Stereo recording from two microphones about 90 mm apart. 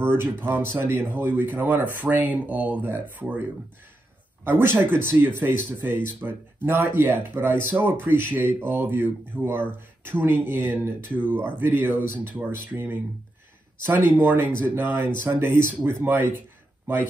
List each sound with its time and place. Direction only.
0.0 s speech: 25° right (ahead or behind)
4.5 s speech: 25° right (ahead or behind)